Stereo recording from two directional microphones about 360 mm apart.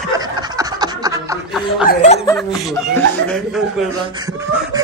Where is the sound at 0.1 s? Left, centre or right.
Centre.